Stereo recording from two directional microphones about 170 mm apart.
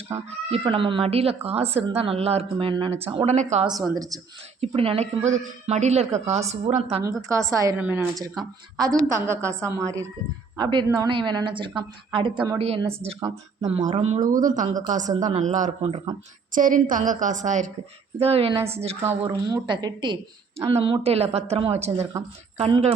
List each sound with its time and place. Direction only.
0.5 s speech: 30° right (ahead or behind)
3.9 s a woman's voice: 20° right (ahead or behind)
4.6 s speech: 35° right (ahead or behind)
7.0 s a woman's voice: 20° right (ahead or behind); by 12.9 s 35° right (ahead or behind)
13.1 s a woman's voice: 20° right (ahead or behind)
13.7 s speech: 35° right (ahead or behind)
18.2 s speech: 35° right (ahead or behind)
19.2 s a woman's voice: 25° right (ahead or behind)